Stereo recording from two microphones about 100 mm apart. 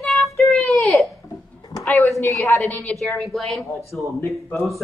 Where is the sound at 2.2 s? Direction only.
30° left (ahead or behind).